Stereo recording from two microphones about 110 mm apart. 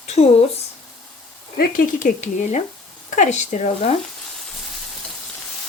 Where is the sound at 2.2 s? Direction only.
90° left.